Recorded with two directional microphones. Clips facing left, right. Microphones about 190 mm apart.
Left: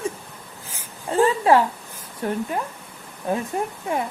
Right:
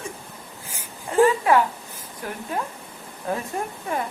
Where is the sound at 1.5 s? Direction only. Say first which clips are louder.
Left 2 dB; 30° left (ahead or behind).